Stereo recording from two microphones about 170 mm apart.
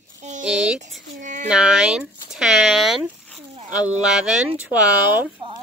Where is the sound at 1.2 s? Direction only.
45° right (ahead or behind).